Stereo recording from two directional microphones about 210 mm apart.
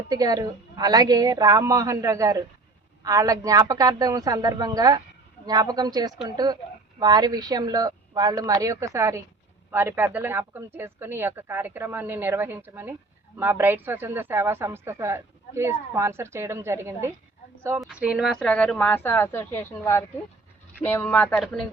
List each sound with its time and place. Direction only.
0.1 s speech: 15° right (ahead or behind); by 21.7 s centre (ahead or behind)